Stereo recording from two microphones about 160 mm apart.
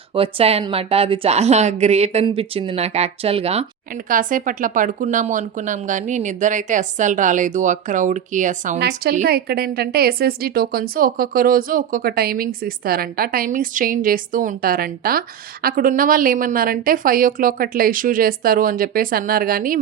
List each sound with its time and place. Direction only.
0.1 s speech: 35° right (ahead or behind)
3.9 s speech: 55° right (ahead or behind)
9.2 s a woman's voice: 75° right (ahead or behind)